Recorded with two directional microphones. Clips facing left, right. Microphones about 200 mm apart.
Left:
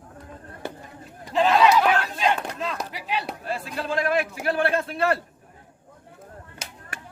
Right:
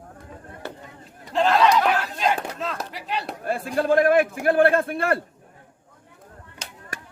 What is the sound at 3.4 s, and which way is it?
Speech, 50° right (ahead or behind).